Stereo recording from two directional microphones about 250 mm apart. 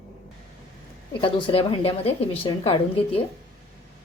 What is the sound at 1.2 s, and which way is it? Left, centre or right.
A woman's voice, left.